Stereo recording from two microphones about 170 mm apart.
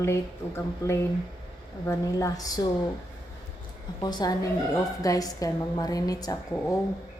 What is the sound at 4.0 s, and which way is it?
A woman's voice, 25° left (ahead or behind).